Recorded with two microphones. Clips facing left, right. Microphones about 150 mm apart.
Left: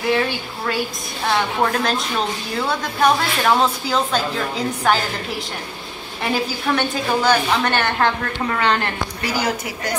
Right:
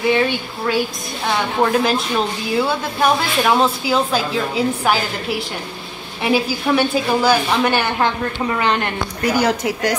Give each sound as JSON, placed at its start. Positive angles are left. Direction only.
{"t": 0.1, "sound": "a woman's voice", "side_deg": 0}
{"t": 6.2, "sound": "a woman's voice", "side_deg": -10}
{"t": 9.2, "sound": "a woman's voice", "side_deg": -60}